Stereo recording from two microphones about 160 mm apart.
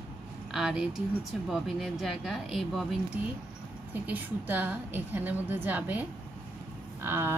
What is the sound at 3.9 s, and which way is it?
A woman's voice, 10° right (ahead or behind).